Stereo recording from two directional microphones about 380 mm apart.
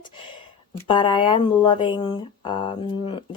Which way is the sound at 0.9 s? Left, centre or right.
Centre.